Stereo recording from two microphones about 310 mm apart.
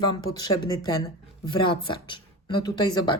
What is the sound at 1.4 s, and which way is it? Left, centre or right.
Speech, centre.